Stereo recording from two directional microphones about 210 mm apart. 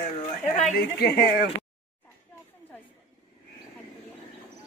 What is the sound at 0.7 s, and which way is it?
Speech, 50° left (ahead or behind).